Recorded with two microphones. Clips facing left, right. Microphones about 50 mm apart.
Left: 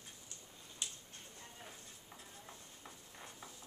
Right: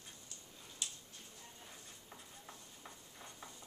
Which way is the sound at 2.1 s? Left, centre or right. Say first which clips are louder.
Left 1 dB; centre.